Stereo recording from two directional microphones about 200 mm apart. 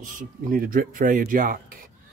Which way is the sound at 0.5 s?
45° right (ahead or behind).